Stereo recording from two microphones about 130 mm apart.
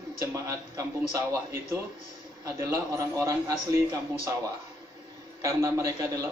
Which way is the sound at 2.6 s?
25° right (ahead or behind).